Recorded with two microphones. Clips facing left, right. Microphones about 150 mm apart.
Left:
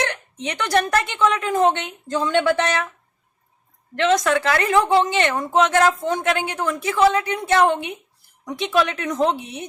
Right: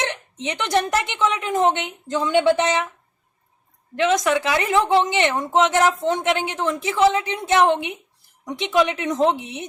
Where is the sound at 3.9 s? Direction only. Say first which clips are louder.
Left 1 dB; 15° right (ahead or behind).